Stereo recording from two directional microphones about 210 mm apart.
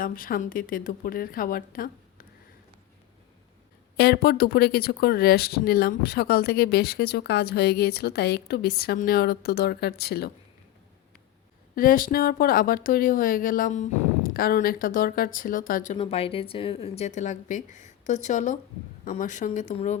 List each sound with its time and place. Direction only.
0.0 s speech: 40° left (ahead or behind)
3.9 s speech: 50° left (ahead or behind)
11.7 s speech: 40° left (ahead or behind)
16.0 s speech: 30° left (ahead or behind)